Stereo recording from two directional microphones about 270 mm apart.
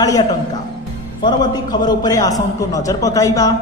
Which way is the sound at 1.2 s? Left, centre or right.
Centre.